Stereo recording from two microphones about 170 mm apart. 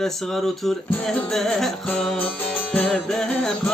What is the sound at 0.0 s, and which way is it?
Music, centre (ahead or behind).